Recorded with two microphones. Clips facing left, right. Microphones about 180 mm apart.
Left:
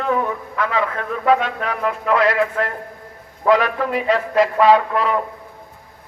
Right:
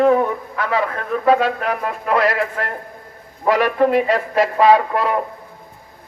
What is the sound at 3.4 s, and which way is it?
Speech, 35° right (ahead or behind).